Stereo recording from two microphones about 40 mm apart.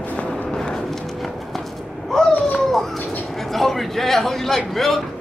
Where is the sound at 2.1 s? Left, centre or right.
Centre.